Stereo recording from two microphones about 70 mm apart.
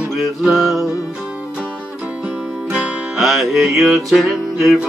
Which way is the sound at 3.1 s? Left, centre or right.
Centre.